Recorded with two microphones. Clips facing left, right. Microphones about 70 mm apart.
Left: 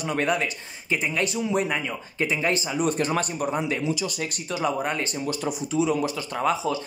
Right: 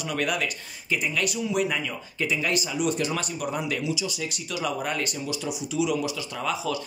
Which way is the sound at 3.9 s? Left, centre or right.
Left.